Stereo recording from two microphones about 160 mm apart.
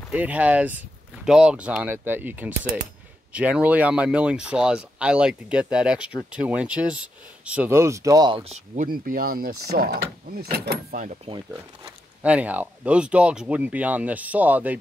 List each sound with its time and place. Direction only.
0.1 s speech: 10° right (ahead or behind); by 8.8 s 40° right (ahead or behind)
8.8 s speech: 65° right (ahead or behind); by 11.0 s 80° right
11.8 s speech: 10° right (ahead or behind)